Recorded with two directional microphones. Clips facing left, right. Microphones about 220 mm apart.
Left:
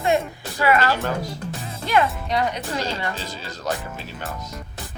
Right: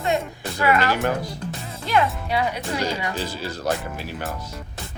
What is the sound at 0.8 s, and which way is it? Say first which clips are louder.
Speech: even; 15° right (ahead or behind).